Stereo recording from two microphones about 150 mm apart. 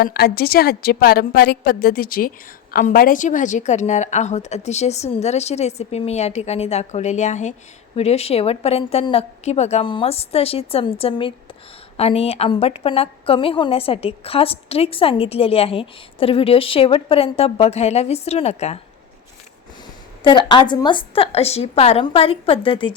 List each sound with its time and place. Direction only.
0.0 s a woman's voice: 90° left; by 9.8 s 45° left (ahead or behind)
9.8 s a woman's voice: 35° left (ahead or behind)
20.2 s a woman's voice: 30° left (ahead or behind)